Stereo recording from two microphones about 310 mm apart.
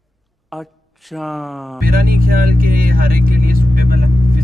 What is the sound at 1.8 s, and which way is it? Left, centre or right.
Speech, right.